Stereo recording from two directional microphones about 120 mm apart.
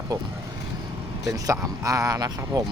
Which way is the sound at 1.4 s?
30° right (ahead or behind).